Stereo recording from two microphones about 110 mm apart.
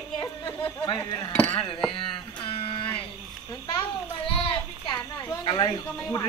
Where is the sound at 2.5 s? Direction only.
55° left (ahead or behind).